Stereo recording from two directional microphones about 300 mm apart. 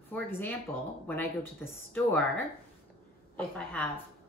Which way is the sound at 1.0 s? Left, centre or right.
Centre.